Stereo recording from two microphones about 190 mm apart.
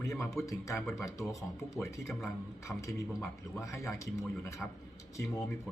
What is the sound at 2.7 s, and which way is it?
Speech, 5° left (ahead or behind).